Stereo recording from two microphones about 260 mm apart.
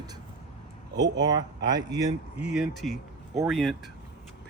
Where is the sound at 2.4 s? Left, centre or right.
Centre.